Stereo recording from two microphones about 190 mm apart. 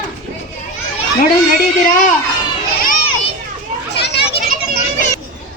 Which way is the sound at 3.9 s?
60° left (ahead or behind).